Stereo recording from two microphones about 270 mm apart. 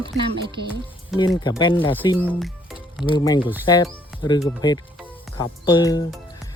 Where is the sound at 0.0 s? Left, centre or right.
Centre.